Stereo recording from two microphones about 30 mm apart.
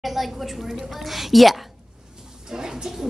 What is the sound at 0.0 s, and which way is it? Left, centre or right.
A woman's voice, centre.